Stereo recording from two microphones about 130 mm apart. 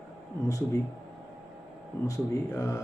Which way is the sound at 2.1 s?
25° left (ahead or behind).